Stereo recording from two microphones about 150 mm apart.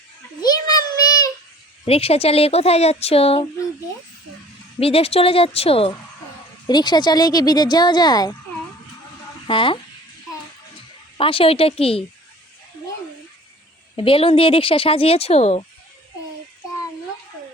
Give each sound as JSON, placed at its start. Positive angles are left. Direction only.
{"t": 0.7, "sound": "child singing", "side_deg": 25}
{"t": 1.8, "sound": "speech", "side_deg": 40}
{"t": 4.8, "sound": "speech", "side_deg": 40}
{"t": 6.7, "sound": "speech", "side_deg": 30}
{"t": 9.5, "sound": "speech", "side_deg": 35}
{"t": 11.2, "sound": "speech", "side_deg": 40}
{"t": 13.9, "sound": "speech", "side_deg": 35}